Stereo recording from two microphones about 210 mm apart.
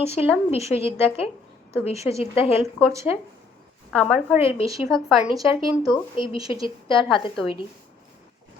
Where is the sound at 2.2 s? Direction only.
30° left (ahead or behind).